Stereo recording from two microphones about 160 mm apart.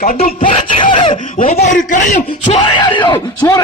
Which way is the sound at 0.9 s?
35° left (ahead or behind).